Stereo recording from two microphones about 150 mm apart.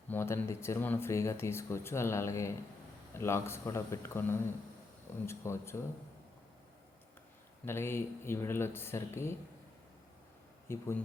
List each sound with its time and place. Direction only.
0.1 s speech: 15° left (ahead or behind)
7.6 s speech: 15° left (ahead or behind)
10.7 s speech: 15° left (ahead or behind)